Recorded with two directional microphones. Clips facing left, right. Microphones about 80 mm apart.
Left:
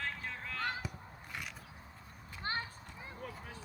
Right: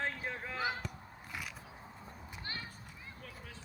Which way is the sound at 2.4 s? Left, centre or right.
Left.